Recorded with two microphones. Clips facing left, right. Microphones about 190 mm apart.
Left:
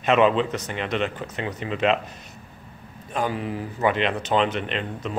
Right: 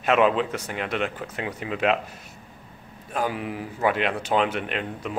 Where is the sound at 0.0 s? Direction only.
5° right (ahead or behind).